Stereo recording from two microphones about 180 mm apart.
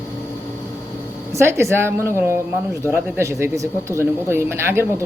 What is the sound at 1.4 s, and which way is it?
Speech, 15° right (ahead or behind).